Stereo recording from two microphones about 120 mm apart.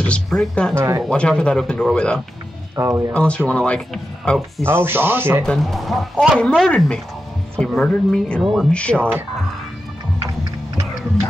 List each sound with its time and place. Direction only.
0.0 s speech: 5° left (ahead or behind)
0.7 s speech: 25° right (ahead or behind)
1.0 s speech: 5° left (ahead or behind)
2.7 s speech: 25° right (ahead or behind)
3.1 s speech: 10° left (ahead or behind)
4.6 s speech: 20° right (ahead or behind)
5.4 s speech: centre (ahead or behind)